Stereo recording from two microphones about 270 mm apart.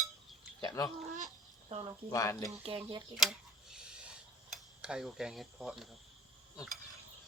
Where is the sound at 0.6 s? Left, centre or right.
Centre.